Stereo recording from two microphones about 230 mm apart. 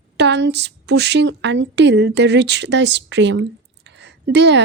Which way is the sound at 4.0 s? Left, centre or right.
Right.